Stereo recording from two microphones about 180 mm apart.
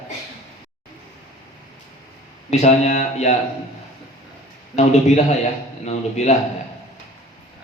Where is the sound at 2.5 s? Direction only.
35° left (ahead or behind).